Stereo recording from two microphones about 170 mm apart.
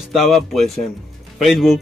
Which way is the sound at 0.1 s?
Centre (ahead or behind).